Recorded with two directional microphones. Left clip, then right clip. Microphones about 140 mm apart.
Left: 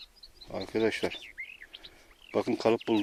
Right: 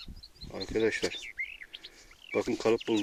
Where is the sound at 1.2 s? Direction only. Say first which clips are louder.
Right 4 dB; 30° right (ahead or behind).